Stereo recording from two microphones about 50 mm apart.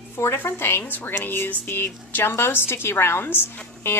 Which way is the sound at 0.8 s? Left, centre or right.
Left.